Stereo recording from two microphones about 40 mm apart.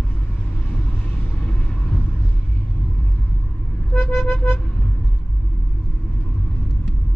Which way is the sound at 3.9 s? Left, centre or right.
Left.